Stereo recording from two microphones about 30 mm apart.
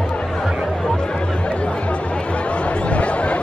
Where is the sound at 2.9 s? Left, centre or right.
Left.